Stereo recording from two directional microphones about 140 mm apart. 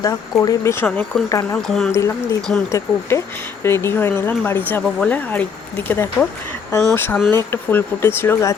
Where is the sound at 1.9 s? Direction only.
20° left (ahead or behind).